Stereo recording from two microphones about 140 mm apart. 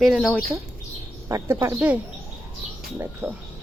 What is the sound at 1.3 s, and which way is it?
Speech, 20° right (ahead or behind).